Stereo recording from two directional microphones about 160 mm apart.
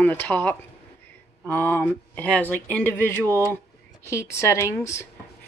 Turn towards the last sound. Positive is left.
turn(degrees=20)  # may be behind; listen again after turning